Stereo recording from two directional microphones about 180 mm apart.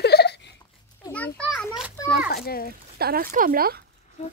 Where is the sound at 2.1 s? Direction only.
60° left (ahead or behind).